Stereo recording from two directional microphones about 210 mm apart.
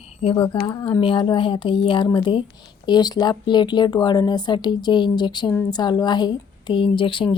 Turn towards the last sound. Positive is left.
turn(degrees=25)  # may be behind; listen again after turning